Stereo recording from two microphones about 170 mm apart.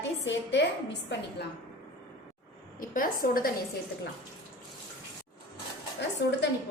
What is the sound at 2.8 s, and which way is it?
Speech, 55° left (ahead or behind).